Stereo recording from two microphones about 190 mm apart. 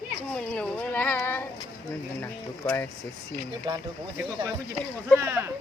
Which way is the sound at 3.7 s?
25° right (ahead or behind).